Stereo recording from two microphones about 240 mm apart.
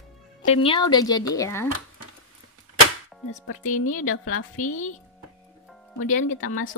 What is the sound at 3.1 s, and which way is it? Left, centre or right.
Music, centre.